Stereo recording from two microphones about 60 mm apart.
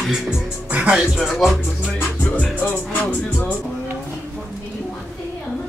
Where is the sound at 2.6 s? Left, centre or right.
Left.